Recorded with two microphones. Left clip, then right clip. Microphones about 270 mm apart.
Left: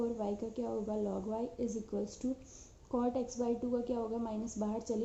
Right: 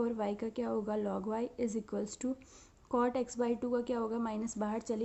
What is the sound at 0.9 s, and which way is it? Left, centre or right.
Speech, right.